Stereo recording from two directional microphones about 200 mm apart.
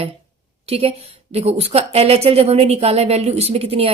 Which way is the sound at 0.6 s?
30° right (ahead or behind).